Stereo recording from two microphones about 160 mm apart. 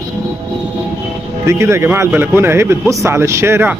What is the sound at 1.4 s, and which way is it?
A man's voice, 15° right (ahead or behind).